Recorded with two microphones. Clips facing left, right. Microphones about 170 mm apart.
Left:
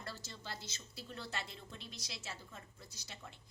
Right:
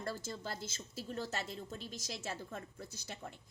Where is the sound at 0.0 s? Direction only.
50° right (ahead or behind).